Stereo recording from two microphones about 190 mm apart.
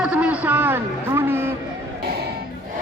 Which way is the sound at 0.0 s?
5° right (ahead or behind).